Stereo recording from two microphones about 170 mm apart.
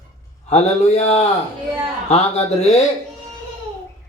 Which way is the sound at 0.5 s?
40° left (ahead or behind).